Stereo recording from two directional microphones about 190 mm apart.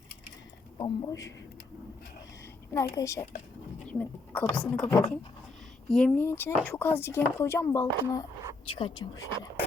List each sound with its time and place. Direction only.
0.8 s speech: 20° left (ahead or behind)
2.4 s a woman's voice: 15° left (ahead or behind)
8.6 s speech: 25° left (ahead or behind)